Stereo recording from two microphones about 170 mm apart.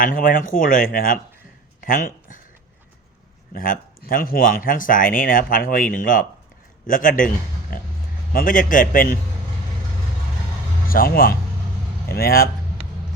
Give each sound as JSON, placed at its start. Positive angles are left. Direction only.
{"t": 0.0, "sound": "speech", "side_deg": 55}
{"t": 3.5, "sound": "speech", "side_deg": 55}
{"t": 8.3, "sound": "speech", "side_deg": 55}
{"t": 10.8, "sound": "speech", "side_deg": 60}